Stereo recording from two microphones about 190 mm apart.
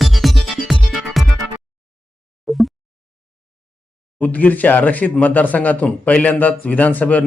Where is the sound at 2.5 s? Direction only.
Centre (ahead or behind).